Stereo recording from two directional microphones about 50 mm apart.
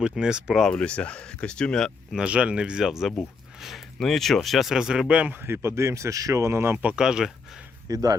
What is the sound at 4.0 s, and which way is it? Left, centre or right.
Speech, centre.